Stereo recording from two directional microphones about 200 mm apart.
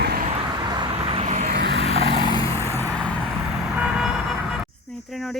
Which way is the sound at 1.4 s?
55° right (ahead or behind).